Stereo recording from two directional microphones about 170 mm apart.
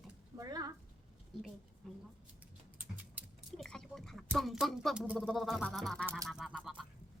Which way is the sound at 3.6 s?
5° left (ahead or behind).